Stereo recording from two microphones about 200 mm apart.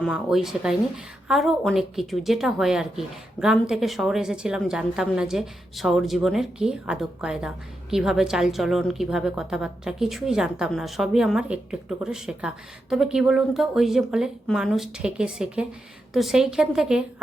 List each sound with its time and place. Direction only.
0.0 s a woman's voice: centre (ahead or behind)